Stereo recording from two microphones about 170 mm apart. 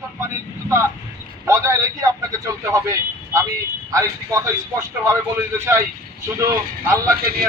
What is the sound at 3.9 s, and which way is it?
A man's voice, 20° right (ahead or behind).